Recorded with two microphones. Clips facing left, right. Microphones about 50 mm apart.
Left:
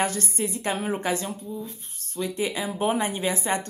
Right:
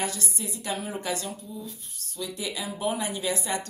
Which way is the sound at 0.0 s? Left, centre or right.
Left.